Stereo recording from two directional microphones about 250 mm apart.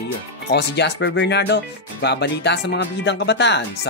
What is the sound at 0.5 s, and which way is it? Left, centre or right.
Speech, left.